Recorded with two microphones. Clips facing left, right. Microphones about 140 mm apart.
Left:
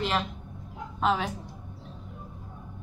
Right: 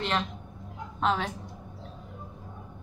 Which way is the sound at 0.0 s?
Centre (ahead or behind).